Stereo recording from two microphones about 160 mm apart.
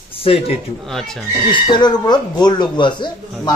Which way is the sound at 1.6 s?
25° left (ahead or behind).